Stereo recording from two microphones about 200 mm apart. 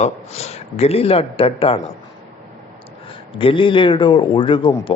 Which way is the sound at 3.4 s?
25° left (ahead or behind).